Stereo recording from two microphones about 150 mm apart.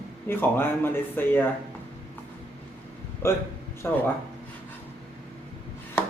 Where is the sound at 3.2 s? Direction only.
15° left (ahead or behind).